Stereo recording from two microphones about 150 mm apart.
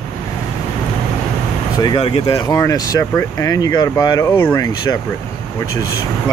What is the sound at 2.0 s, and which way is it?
Speech, 40° left (ahead or behind).